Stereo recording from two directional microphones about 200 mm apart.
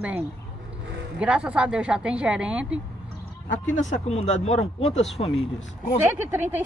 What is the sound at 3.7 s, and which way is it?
Speech, 35° left (ahead or behind).